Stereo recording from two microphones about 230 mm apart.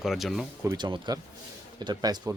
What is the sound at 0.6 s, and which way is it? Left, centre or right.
Speech, centre.